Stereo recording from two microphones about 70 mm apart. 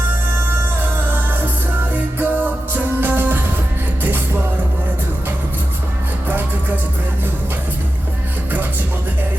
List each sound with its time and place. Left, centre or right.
0.4 s music: right
6.2 s music: right